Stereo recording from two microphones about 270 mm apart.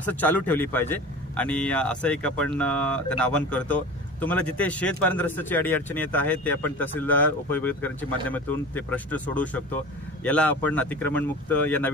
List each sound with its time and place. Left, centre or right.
0.0 s speech: centre